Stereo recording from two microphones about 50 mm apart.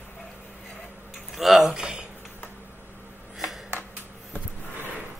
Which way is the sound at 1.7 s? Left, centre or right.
Centre.